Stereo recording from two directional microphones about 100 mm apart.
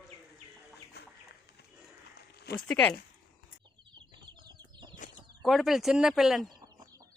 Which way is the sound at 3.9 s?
50° right (ahead or behind).